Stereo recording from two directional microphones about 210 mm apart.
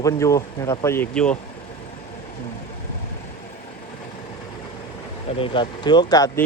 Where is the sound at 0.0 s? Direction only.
15° left (ahead or behind).